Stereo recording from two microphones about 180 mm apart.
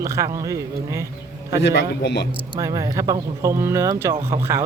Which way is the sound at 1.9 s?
70° left (ahead or behind).